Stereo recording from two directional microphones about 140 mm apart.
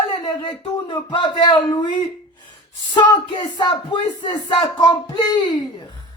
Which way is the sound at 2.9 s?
35° left (ahead or behind).